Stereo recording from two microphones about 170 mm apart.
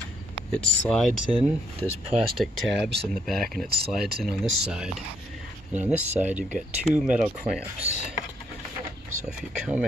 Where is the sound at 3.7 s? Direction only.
65° right (ahead or behind).